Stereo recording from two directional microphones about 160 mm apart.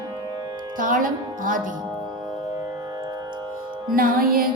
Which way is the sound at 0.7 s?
55° right (ahead or behind).